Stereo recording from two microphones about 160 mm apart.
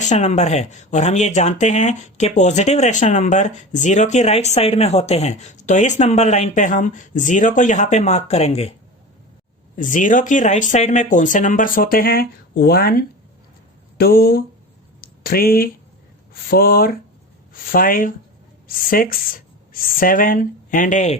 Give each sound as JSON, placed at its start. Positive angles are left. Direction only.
{"t": 0.0, "sound": "speech", "side_deg": 45}
{"t": 9.7, "sound": "speech", "side_deg": 55}
{"t": 15.0, "sound": "a sound", "side_deg": 70}
{"t": 16.3, "sound": "speech", "side_deg": 70}